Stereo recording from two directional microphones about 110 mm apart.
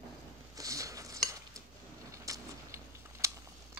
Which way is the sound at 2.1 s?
30° right (ahead or behind).